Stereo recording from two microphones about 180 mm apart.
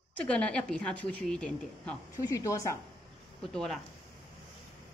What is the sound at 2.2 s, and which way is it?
Speech, 20° left (ahead or behind).